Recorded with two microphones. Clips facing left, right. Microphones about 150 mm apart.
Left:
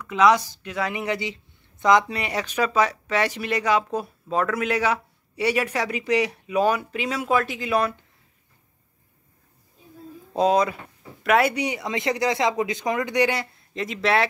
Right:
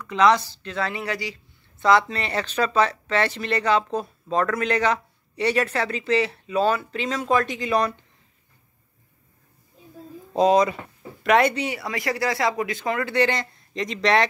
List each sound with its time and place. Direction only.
0.0 s speech: 10° left (ahead or behind)
10.3 s speech: 5° left (ahead or behind)
11.5 s speech: 15° left (ahead or behind)